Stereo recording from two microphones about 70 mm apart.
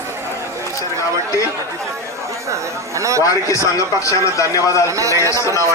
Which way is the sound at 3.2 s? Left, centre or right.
Left.